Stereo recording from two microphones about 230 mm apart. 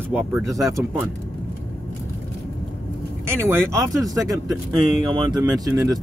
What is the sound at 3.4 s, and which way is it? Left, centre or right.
Speech, centre.